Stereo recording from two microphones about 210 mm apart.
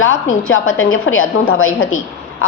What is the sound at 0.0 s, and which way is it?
A woman's voice, 70° left (ahead or behind).